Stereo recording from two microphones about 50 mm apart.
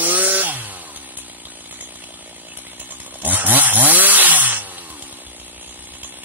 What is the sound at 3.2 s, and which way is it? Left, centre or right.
Chainsaw, right.